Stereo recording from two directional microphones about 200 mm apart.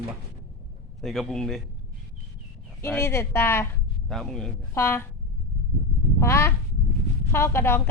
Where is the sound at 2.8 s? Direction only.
10° left (ahead or behind).